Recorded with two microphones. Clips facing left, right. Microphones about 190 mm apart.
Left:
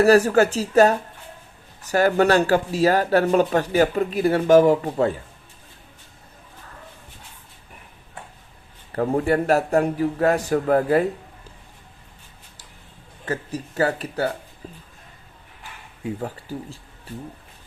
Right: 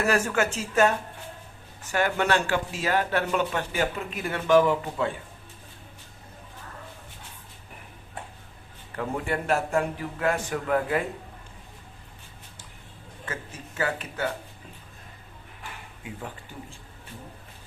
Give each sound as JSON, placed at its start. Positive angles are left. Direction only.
{"t": 0.0, "sound": "speech", "side_deg": 35}
{"t": 9.0, "sound": "speech", "side_deg": 40}
{"t": 13.2, "sound": "speech", "side_deg": 35}
{"t": 16.2, "sound": "speech", "side_deg": 35}